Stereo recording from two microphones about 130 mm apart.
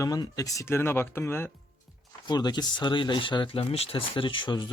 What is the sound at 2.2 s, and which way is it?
Speech, 35° left (ahead or behind).